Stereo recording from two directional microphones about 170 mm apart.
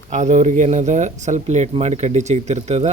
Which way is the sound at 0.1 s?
45° right (ahead or behind).